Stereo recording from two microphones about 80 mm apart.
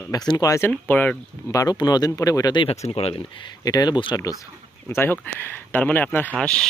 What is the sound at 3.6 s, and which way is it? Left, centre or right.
Speech, left.